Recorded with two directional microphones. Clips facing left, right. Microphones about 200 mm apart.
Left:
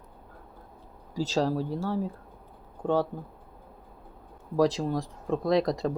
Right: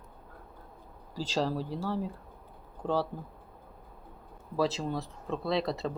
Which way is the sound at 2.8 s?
10° left (ahead or behind).